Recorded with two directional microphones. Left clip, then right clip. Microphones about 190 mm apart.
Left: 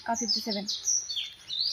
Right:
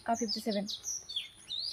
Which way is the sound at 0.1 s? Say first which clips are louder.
Left 5 dB; 30° right (ahead or behind).